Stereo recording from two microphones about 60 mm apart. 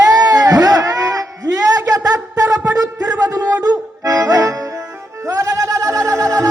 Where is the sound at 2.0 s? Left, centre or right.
Right.